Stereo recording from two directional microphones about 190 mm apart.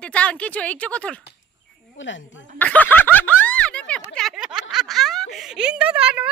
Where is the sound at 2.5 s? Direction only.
10° left (ahead or behind).